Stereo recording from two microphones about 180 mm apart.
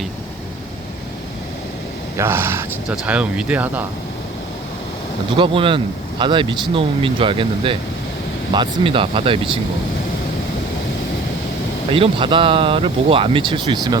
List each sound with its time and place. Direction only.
2.1 s speech: 15° right (ahead or behind)
5.4 s speech: 30° right (ahead or behind)
11.9 s speech: 30° right (ahead or behind)